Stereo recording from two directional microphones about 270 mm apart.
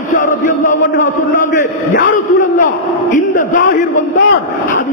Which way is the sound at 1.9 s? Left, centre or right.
Left.